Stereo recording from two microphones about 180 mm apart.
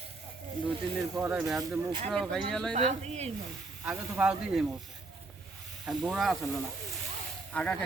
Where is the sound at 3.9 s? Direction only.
5° right (ahead or behind).